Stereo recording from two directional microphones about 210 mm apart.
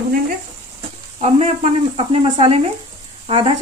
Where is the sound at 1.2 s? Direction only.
30° right (ahead or behind).